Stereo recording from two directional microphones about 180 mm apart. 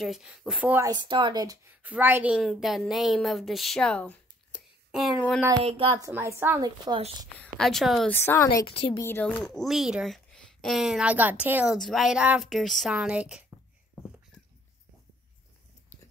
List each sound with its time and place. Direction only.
0.0 s speech: centre (ahead or behind)
0.8 s speech: 25° right (ahead or behind)
1.8 s speech: 10° right (ahead or behind); by 4.6 s 5° left (ahead or behind)
5.6 s a woman's voice: 30° right (ahead or behind); by 6.7 s 15° right (ahead or behind)
7.3 s speech: 5° left (ahead or behind)
8.1 s a woman's voice: 15° left (ahead or behind)
8.5 s a woman's voice: 30° left (ahead or behind)
9.0 s a woman's voice: 10° left (ahead or behind)
9.3 s speech: centre (ahead or behind)